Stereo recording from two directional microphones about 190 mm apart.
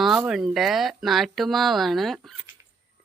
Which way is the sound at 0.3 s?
Centre (ahead or behind).